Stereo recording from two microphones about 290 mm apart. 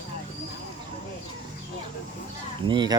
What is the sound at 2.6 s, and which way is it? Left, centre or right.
Speech, centre.